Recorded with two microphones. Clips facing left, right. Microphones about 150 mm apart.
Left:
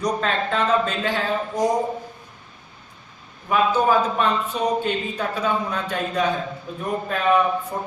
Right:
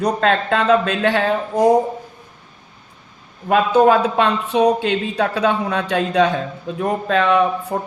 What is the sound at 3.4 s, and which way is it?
A man's voice, 70° right (ahead or behind).